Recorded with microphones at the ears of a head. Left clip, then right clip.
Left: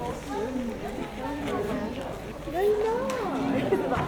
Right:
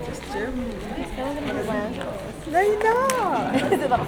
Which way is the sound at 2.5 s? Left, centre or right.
Right.